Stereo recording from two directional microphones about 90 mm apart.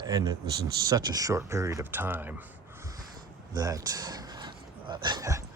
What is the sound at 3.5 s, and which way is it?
Speech, 45° right (ahead or behind).